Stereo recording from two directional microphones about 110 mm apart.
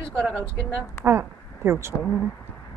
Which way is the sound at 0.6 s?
20° right (ahead or behind).